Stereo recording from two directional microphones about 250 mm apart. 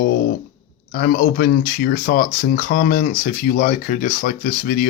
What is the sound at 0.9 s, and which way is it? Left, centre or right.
Speech, left.